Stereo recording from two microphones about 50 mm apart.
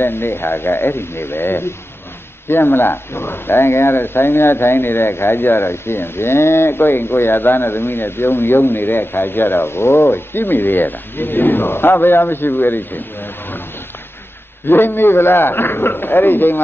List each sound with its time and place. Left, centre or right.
0.0 s speech: left
10.0 s speech: left
14.7 s speech: left